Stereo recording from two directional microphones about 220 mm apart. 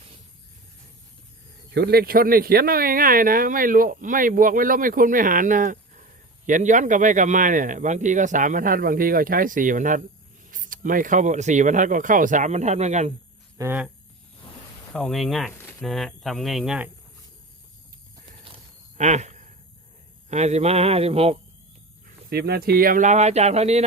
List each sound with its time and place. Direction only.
1.7 s speech: 45° right (ahead or behind); by 13.1 s 30° right (ahead or behind)
13.6 s speech: 10° right (ahead or behind)
14.9 s speech: centre (ahead or behind)
18.9 s a sound: 30° right (ahead or behind)
22.0 s speech: 45° right (ahead or behind)